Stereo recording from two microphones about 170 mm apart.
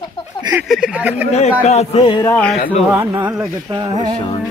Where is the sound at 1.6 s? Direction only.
40° left (ahead or behind).